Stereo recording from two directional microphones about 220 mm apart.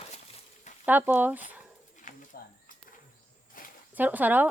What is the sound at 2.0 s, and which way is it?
Bird, 35° left (ahead or behind).